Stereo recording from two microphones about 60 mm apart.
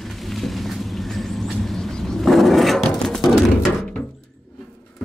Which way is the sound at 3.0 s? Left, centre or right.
Centre.